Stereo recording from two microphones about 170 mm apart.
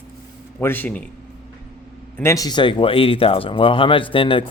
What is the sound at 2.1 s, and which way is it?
Speech, 15° left (ahead or behind).